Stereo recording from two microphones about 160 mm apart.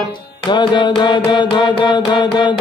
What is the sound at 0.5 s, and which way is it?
Mantra, 30° left (ahead or behind).